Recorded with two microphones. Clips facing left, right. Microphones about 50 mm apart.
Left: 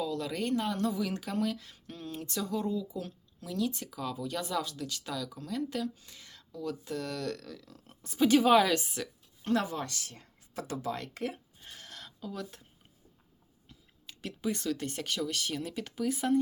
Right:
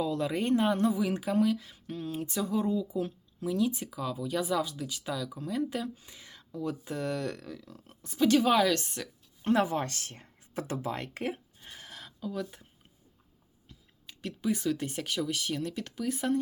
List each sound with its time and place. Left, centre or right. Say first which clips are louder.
0.0 s speech: right 3 dB; right
7.9 s a woman's voice: even; centre
9.4 s speech: right 4 dB; right
11.6 s a sound: right 1 dB; centre
13.7 s speech: even; centre